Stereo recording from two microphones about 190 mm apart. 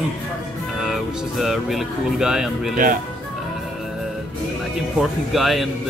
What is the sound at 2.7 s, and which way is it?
Speech, 45° right (ahead or behind).